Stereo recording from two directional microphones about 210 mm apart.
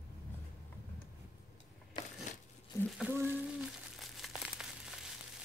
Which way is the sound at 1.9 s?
25° left (ahead or behind).